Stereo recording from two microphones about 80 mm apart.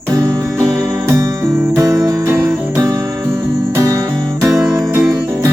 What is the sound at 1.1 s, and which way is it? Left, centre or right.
Music, right.